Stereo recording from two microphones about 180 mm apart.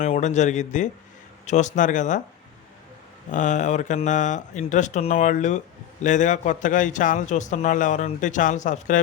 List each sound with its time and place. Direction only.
0.0 s speech: 40° left (ahead or behind)
3.3 s speech: 45° left (ahead or behind)